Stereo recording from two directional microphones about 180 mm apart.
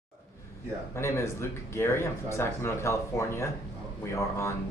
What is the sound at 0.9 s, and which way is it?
Speech, 15° left (ahead or behind).